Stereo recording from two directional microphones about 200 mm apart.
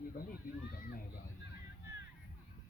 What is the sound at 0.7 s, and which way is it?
Speech, 45° left (ahead or behind).